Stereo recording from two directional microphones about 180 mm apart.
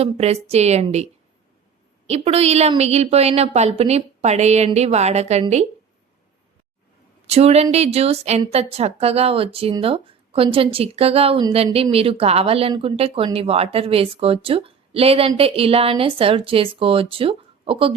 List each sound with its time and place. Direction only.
0.0 s a woman's voice: 35° right (ahead or behind)
2.0 s a woman's voice: 35° right (ahead or behind)
7.3 s a woman's voice: 35° right (ahead or behind)